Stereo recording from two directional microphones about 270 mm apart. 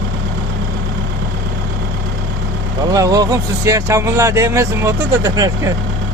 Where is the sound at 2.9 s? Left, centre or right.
Centre.